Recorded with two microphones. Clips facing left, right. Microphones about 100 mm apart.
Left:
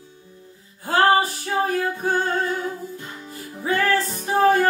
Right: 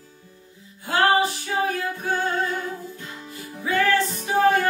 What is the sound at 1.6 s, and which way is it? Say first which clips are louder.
Music: left 4 dB; 40° left (ahead or behind).